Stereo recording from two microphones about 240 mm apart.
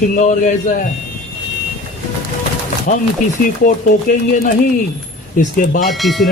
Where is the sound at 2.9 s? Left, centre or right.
Left.